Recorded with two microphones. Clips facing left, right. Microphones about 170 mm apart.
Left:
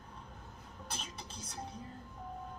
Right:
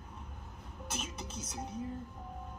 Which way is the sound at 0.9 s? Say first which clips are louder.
Right 5 dB; 5° right (ahead or behind).